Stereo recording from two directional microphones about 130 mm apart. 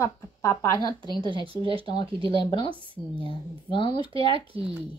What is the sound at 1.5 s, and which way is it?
Speech, 45° right (ahead or behind).